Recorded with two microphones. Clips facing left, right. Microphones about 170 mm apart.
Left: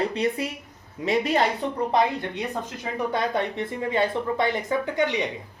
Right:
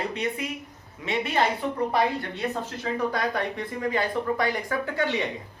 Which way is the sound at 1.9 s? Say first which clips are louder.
Left 2 dB; 20° left (ahead or behind).